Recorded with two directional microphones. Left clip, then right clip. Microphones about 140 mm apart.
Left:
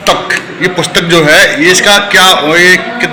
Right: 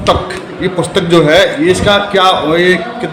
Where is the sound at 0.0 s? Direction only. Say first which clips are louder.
Left 3 dB; 5° right (ahead or behind).